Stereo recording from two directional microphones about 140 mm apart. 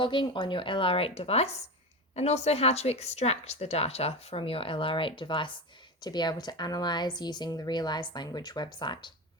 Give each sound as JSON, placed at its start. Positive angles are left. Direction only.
{"t": 0.0, "sound": "speech", "side_deg": 35}